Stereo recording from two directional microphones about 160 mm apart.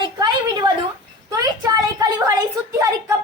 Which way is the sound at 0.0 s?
25° right (ahead or behind).